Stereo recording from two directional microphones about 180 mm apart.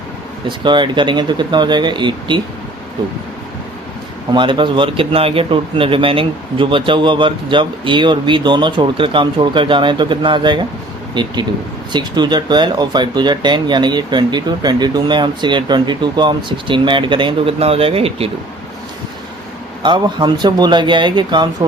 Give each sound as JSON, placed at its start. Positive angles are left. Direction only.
{"t": 0.4, "sound": "speech", "side_deg": -25}
{"t": 4.3, "sound": "speech", "side_deg": -25}
{"t": 19.8, "sound": "speech", "side_deg": -25}